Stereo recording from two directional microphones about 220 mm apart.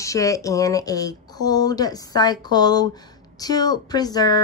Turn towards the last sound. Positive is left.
turn(degrees=15)  # may be behind; listen again after turning